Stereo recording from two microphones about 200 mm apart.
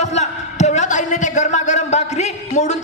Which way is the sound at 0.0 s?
35° left (ahead or behind).